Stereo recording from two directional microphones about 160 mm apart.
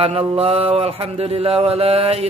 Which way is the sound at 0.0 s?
40° right (ahead or behind).